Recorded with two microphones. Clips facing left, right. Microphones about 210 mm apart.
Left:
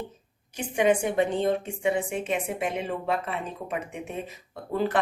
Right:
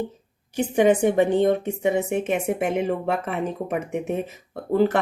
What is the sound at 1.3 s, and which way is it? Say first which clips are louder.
Speech: right 6 dB; 65° right (ahead or behind).